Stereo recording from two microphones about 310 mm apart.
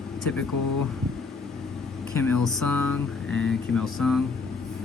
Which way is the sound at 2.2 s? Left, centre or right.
Centre.